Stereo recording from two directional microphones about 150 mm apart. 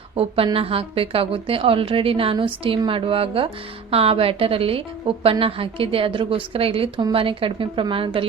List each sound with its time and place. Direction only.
0.2 s a woman's voice: 40° right (ahead or behind)